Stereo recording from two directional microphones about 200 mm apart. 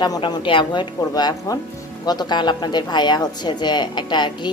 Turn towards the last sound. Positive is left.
turn(degrees=20)  # may be behind; listen again after turning